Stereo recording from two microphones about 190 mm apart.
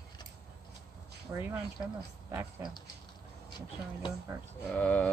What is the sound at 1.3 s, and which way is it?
Speech, 10° right (ahead or behind).